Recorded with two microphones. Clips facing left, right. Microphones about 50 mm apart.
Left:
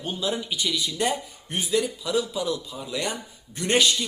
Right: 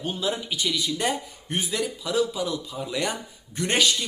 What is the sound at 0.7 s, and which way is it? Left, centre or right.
A man's voice, right.